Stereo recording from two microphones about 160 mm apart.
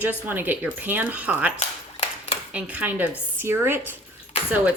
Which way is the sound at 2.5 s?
10° right (ahead or behind).